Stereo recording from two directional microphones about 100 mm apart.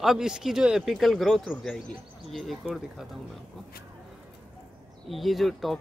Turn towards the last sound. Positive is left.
turn(degrees=0)  # may be behind; listen again after turning